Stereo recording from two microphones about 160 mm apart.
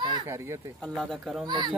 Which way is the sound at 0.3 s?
15° right (ahead or behind).